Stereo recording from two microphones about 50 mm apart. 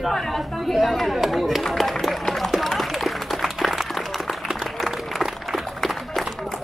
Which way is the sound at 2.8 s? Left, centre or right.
Centre.